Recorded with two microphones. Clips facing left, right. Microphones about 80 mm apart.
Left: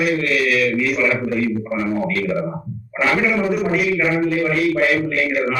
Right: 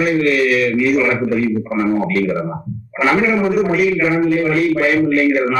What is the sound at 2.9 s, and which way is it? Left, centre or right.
A man's voice, centre.